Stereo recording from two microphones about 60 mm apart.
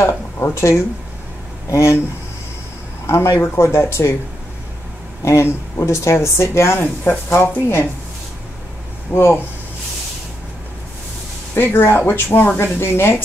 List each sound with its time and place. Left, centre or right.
0.0 s speech: left
3.1 s speech: left
5.2 s speech: left
9.1 s speech: left
11.5 s speech: left